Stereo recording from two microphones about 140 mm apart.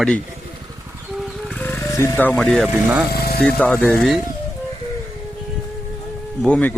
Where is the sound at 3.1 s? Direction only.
90° left.